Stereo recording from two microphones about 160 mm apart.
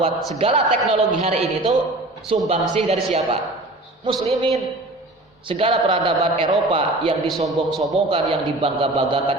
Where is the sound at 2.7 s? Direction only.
40° right (ahead or behind).